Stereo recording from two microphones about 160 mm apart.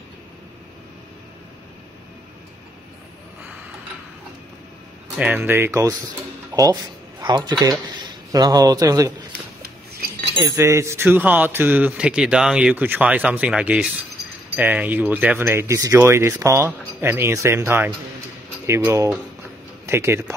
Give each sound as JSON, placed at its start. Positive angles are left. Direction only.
{"t": 5.2, "sound": "a man's voice", "side_deg": -10}
{"t": 9.6, "sound": "a sound", "side_deg": -70}
{"t": 10.5, "sound": "speech", "side_deg": -15}